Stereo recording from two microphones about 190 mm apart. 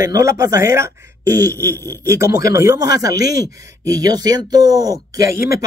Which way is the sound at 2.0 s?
15° right (ahead or behind).